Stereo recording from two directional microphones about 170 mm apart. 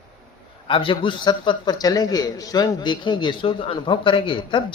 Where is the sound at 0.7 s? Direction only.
30° left (ahead or behind).